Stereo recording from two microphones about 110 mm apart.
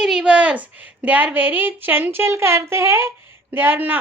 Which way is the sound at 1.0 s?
15° right (ahead or behind).